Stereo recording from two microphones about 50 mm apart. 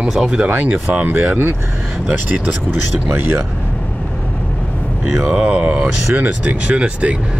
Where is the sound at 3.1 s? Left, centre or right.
Right.